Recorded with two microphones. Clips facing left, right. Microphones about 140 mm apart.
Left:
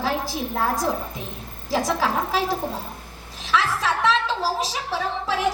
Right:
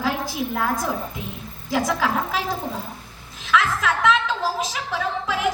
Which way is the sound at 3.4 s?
35° left (ahead or behind).